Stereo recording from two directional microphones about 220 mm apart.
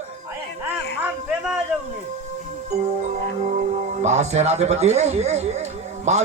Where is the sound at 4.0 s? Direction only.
30° right (ahead or behind).